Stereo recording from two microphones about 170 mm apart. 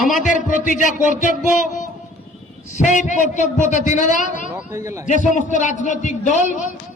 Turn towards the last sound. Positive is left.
turn(degrees=45)  # may be behind; listen again after turning